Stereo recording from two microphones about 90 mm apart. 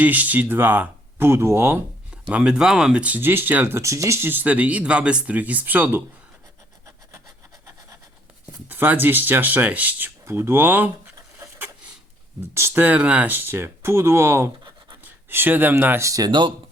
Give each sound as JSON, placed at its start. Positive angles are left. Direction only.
{"t": 0.0, "sound": "speech", "side_deg": -20}
{"t": 2.3, "sound": "speech", "side_deg": -10}
{"t": 3.8, "sound": "speech", "side_deg": -35}
{"t": 8.7, "sound": "speech", "side_deg": -20}
{"t": 10.2, "sound": "speech", "side_deg": -30}
{"t": 12.5, "sound": "speech", "side_deg": -30}
{"t": 12.8, "sound": "speech", "side_deg": -15}